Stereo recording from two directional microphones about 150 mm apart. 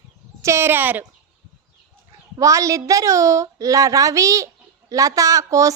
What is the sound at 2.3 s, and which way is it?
A woman's voice, 20° right (ahead or behind).